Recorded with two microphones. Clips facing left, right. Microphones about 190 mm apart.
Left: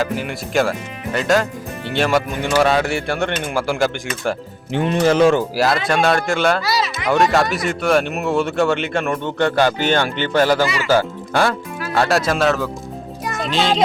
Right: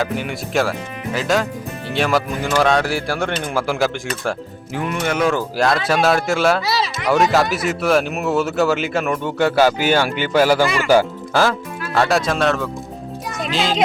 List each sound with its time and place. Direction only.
0.0 s speech: centre (ahead or behind)
4.7 s speech: 25° left (ahead or behind)
5.5 s speech: centre (ahead or behind)
11.9 s a child's voice: centre (ahead or behind)